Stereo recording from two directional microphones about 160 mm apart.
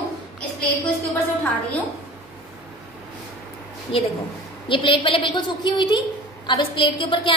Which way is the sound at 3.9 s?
35° left (ahead or behind).